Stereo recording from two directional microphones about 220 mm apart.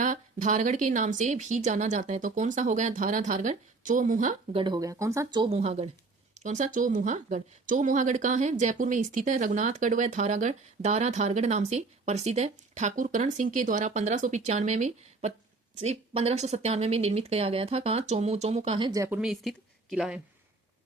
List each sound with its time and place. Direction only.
0.0 s speech: 35° right (ahead or behind)
4.5 s speech: 20° right (ahead or behind); by 20.2 s 5° right (ahead or behind)